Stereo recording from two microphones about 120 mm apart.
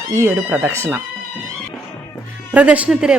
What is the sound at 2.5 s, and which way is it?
Speech, 10° right (ahead or behind).